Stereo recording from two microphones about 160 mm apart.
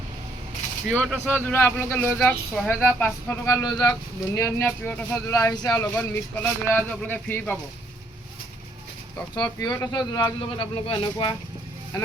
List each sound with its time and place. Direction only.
0.9 s speech: 5° left (ahead or behind)
9.3 s speech: 25° left (ahead or behind)